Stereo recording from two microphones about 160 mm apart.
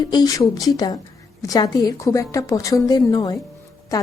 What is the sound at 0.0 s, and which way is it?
A woman's voice, 25° left (ahead or behind).